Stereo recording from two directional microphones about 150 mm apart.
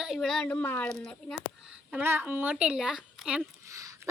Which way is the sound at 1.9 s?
15° right (ahead or behind).